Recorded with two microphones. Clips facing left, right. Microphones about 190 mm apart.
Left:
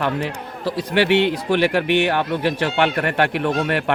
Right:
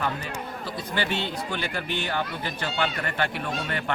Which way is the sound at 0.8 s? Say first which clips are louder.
Left 12 dB; 75° left (ahead or behind).